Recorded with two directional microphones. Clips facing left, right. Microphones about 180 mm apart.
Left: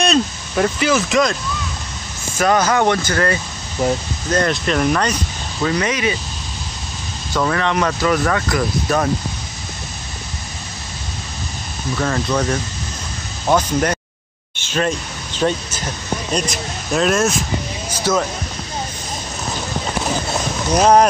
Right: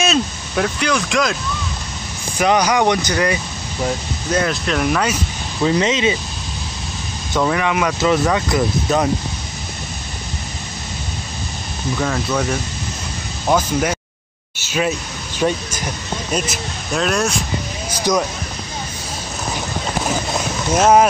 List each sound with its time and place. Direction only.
0.0 s speech: centre (ahead or behind)
2.3 s speech: 15° right (ahead or behind)
4.3 s speech: 5° right (ahead or behind)
5.6 s speech: 20° right (ahead or behind)
7.3 s speech: 10° right (ahead or behind)
8.0 s speech: 20° right (ahead or behind)
11.9 s speech: 5° right (ahead or behind)
17.9 s speech: 15° right (ahead or behind)
20.3 s roaring cats: 5° right (ahead or behind)